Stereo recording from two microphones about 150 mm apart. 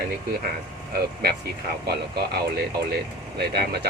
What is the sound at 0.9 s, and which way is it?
Speech, 90° right.